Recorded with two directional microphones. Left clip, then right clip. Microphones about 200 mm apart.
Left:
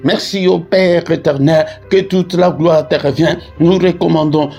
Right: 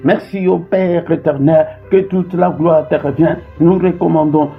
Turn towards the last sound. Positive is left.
turn(degrees=40)  # may be behind; listen again after turning